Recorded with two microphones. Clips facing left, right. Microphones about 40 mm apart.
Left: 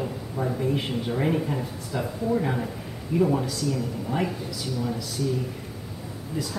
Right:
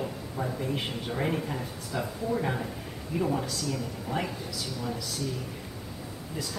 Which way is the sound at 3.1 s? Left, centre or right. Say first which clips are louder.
Left 7 dB; centre.